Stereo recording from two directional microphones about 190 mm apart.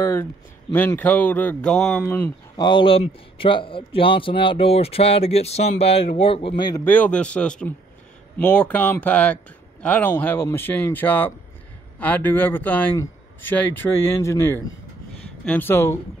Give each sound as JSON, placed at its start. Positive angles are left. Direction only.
{"t": 0.0, "sound": "speech", "side_deg": 15}
{"t": 2.5, "sound": "a man's voice", "side_deg": 25}
{"t": 6.8, "sound": "a man's voice", "side_deg": 10}